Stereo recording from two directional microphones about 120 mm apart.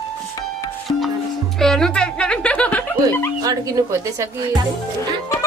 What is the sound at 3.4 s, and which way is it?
Speech, 30° right (ahead or behind).